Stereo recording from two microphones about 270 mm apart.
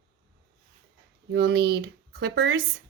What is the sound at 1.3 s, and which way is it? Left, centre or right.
A woman's voice, right.